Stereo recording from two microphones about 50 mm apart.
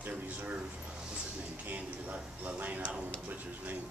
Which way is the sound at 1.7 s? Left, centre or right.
Right.